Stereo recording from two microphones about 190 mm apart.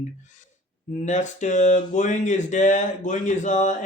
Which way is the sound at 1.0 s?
40° left (ahead or behind).